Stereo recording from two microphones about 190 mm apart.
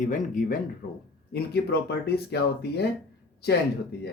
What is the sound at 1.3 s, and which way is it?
Speech, 60° left (ahead or behind).